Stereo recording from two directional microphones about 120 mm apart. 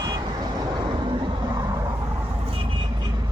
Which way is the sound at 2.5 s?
45° right (ahead or behind).